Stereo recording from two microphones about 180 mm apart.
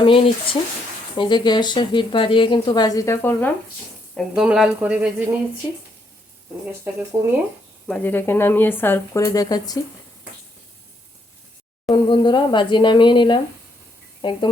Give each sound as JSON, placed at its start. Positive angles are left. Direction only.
{"t": 0.0, "sound": "speech", "side_deg": 30}
{"t": 4.1, "sound": "speech", "side_deg": -5}
{"t": 6.8, "sound": "speech", "side_deg": -10}
{"t": 7.9, "sound": "speech", "side_deg": 10}
{"t": 11.9, "sound": "speech", "side_deg": 25}